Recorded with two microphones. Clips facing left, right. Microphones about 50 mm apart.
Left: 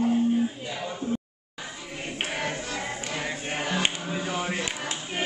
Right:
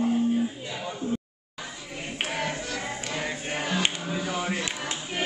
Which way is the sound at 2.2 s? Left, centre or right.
Centre.